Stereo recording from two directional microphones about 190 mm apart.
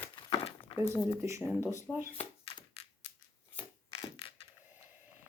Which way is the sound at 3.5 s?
30° left (ahead or behind).